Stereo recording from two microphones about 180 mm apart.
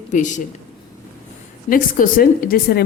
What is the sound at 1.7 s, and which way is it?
A woman's voice, 50° left (ahead or behind).